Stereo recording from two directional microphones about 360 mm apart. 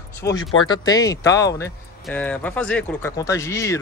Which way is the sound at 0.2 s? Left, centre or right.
Centre.